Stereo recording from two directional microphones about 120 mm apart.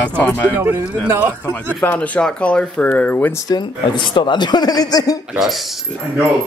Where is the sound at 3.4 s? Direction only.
35° left (ahead or behind).